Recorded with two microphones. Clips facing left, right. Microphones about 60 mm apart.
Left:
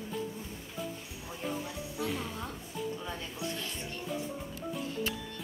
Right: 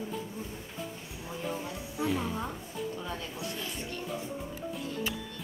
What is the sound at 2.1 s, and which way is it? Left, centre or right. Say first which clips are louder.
Music: right 5 dB; centre.